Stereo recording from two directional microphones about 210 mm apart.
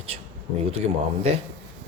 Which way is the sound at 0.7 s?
30° right (ahead or behind).